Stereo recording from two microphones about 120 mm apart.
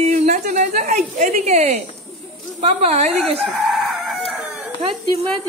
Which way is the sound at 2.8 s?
65° right (ahead or behind).